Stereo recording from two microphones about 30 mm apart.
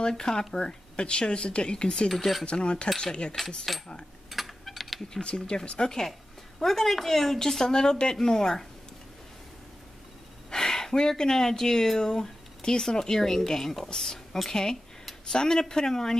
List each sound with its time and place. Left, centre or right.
0.2 s speech: left
0.6 s speech: left
2.0 s a woman's voice: centre
2.4 s speech: left
3.3 s speech: centre
4.3 s typing: centre
5.9 s a woman's voice: centre
10.5 s a woman's voice: centre